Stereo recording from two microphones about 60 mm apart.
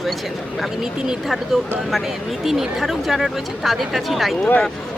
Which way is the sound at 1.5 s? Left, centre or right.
Centre.